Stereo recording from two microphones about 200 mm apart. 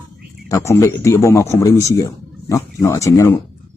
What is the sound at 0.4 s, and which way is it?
Speech, 15° left (ahead or behind).